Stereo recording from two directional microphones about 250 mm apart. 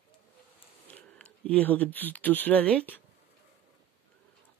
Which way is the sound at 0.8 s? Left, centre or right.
Centre.